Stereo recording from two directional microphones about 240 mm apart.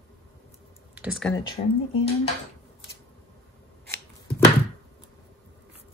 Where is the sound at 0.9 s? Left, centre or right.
Centre.